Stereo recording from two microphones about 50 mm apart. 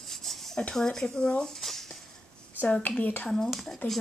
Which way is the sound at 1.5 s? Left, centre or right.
Centre.